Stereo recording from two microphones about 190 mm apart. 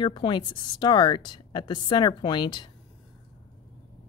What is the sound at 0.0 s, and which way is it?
A woman's voice, 25° left (ahead or behind).